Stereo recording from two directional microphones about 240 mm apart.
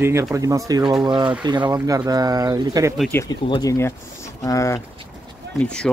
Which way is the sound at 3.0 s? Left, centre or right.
Centre.